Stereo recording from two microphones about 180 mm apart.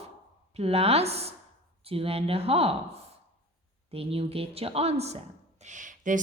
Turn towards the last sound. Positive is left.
turn(degrees=-45)  # may be behind; listen again after turning